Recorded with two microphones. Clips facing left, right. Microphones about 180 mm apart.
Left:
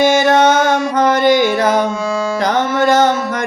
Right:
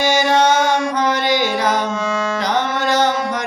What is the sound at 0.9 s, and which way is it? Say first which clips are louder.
Music: left 6 dB; 50° left (ahead or behind).